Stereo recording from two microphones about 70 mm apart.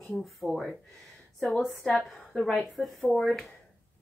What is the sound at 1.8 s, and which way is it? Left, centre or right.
Speech, centre.